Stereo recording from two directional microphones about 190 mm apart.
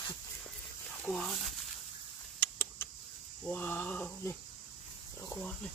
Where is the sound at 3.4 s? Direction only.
10° left (ahead or behind).